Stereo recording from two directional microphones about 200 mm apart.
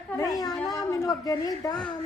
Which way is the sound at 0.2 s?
20° left (ahead or behind).